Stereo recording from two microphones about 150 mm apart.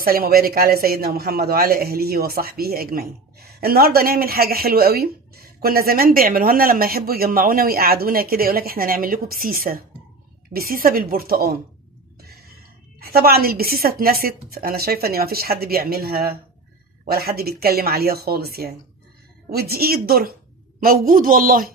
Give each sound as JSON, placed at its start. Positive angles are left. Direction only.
{"t": 0.0, "sound": "a man's voice", "side_deg": -80}
{"t": 12.2, "sound": "a sound", "side_deg": -90}
{"t": 13.0, "sound": "speech", "side_deg": -90}
{"t": 20.8, "sound": "a woman's voice", "side_deg": -70}